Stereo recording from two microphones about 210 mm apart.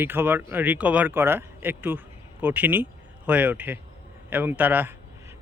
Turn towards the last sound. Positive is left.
turn(degrees=-10)  # may be behind; listen again after turning